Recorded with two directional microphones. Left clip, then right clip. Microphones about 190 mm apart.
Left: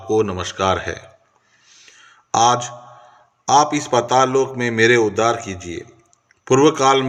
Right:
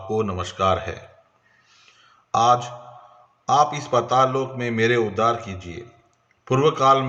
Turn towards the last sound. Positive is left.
turn(degrees=30)  # may be behind; listen again after turning